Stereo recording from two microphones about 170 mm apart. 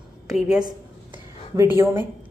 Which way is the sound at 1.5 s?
15° right (ahead or behind).